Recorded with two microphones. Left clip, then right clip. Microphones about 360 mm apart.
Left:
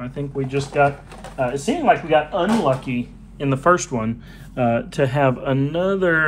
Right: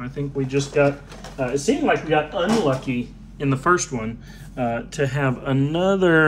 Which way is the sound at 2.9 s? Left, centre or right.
Centre.